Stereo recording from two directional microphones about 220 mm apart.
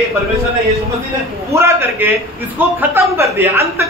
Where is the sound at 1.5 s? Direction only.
10° right (ahead or behind).